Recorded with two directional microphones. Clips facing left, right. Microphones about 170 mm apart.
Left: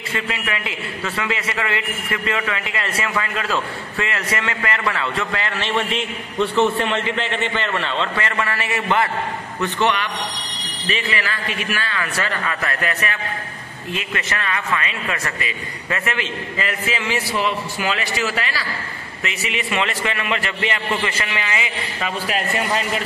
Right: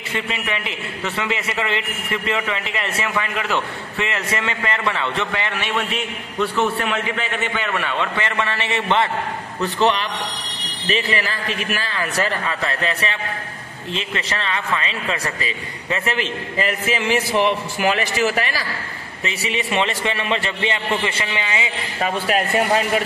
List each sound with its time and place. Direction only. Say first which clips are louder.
0.3 s a man's voice: even; 25° right (ahead or behind)
5.8 s a man's voice: left 2 dB; 5° right (ahead or behind)
8.2 s a man's voice: even; 20° right (ahead or behind)
10.9 s a man's voice: right 2 dB; 35° right (ahead or behind)
19.2 s a man's voice: right 2 dB; 35° right (ahead or behind)
22.0 s a man's voice: right 4 dB; 50° right (ahead or behind)